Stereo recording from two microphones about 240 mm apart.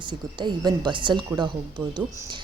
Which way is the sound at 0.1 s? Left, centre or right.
Centre.